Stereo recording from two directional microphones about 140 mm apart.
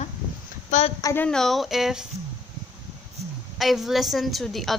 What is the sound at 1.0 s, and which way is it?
Speech, 20° left (ahead or behind).